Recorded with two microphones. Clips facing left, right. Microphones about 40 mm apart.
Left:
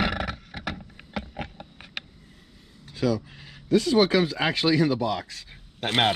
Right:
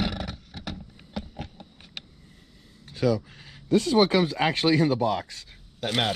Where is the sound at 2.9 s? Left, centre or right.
Left.